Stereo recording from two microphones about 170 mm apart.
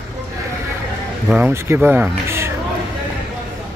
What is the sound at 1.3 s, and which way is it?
Speech, 10° right (ahead or behind).